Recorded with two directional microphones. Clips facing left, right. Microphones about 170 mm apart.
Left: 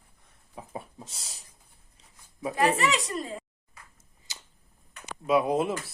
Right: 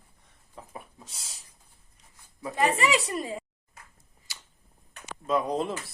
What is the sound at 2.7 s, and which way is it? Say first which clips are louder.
Speech: right 1 dB; centre (ahead or behind).